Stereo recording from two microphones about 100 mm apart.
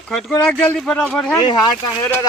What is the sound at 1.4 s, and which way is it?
Speech, 50° left (ahead or behind).